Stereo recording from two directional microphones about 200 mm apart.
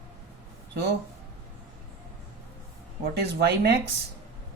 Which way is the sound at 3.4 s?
55° right (ahead or behind).